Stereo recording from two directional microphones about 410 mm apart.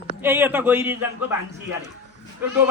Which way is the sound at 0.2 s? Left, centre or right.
Centre.